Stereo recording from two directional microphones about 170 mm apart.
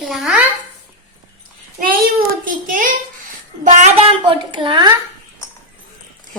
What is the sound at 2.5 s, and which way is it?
Speech, 55° right (ahead or behind).